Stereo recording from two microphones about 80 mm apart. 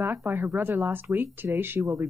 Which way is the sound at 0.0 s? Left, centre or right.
Right.